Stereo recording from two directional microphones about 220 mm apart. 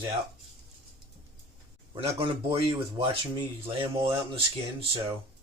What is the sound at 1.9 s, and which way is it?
Speech, 25° right (ahead or behind).